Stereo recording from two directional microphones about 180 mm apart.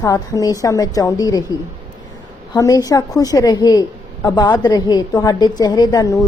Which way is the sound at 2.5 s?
20° left (ahead or behind).